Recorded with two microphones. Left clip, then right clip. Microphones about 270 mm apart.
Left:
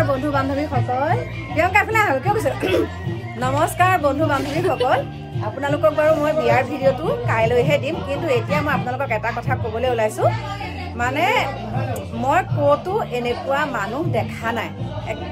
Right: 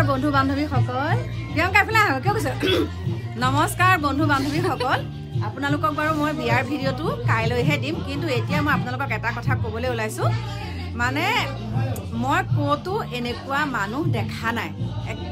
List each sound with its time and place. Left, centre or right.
0.0 s a sound: centre
0.4 s a woman's voice: centre
3.5 s a woman's voice: centre
6.9 s a woman's voice: centre
7.3 s a woman's voice: centre